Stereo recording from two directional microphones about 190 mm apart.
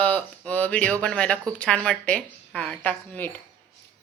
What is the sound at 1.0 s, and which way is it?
Speech, 5° left (ahead or behind).